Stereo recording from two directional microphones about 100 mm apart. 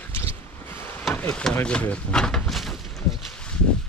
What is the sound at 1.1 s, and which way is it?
Speech, 15° left (ahead or behind).